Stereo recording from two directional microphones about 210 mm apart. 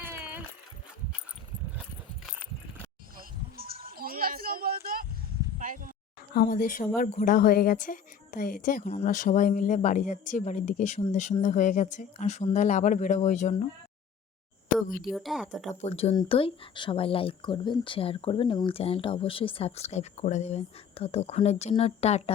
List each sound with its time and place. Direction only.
0.0 s a sound: 10° right (ahead or behind)
3.2 s a sound: 45° right (ahead or behind)
5.5 s speech: 40° right (ahead or behind)
6.3 s speech: 45° left (ahead or behind)
15.0 s speech: centre (ahead or behind)
15.7 s speech: 30° left (ahead or behind)